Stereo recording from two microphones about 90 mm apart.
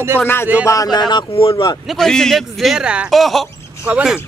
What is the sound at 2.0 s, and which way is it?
Speech, 5° left (ahead or behind).